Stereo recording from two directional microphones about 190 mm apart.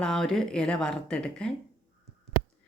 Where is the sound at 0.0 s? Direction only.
5° left (ahead or behind).